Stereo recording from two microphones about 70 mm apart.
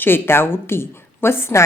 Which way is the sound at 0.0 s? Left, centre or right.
Left.